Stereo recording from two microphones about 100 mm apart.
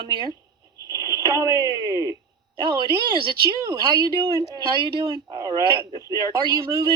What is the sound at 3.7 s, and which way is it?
Speech, 35° right (ahead or behind).